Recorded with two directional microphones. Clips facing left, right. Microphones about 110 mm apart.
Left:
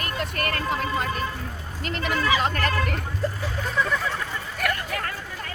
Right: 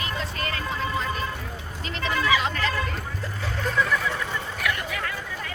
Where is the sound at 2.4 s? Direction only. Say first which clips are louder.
Left 2 dB; 50° left (ahead or behind).